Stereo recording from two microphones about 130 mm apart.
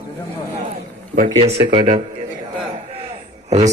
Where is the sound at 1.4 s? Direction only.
50° right (ahead or behind).